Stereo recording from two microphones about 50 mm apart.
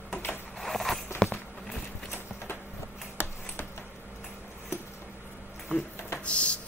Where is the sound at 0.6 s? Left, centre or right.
Centre.